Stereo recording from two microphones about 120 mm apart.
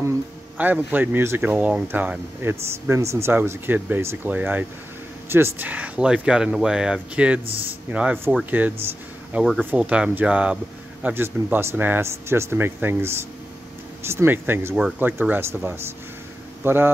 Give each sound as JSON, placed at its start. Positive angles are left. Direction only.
{"t": 0.6, "sound": "speech", "side_deg": -15}
{"t": 9.3, "sound": "speech", "side_deg": -5}